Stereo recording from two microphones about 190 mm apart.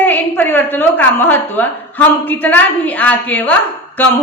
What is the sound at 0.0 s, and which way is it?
A woman's voice, 10° left (ahead or behind).